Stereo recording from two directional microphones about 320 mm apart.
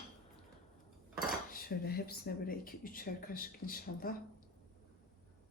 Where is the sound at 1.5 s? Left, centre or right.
Left.